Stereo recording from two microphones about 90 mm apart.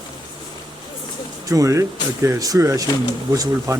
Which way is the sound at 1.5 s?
35° right (ahead or behind).